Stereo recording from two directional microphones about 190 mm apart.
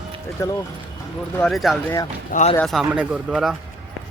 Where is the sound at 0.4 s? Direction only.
15° left (ahead or behind).